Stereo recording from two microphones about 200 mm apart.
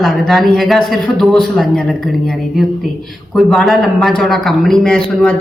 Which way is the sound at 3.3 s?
Centre (ahead or behind).